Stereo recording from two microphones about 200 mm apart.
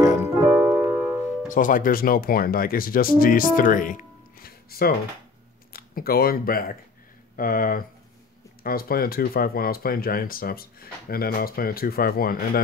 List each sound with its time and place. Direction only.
0.0 s music: 15° right (ahead or behind)
0.5 s music: 5° right (ahead or behind)
1.5 s speech: 40° left (ahead or behind)